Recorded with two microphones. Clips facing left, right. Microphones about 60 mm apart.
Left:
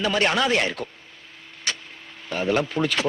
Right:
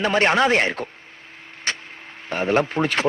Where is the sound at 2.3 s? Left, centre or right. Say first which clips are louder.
Right 3 dB; right.